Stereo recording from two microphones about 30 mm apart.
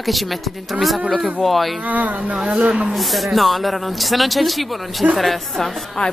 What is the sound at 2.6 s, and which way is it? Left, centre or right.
Speech, right.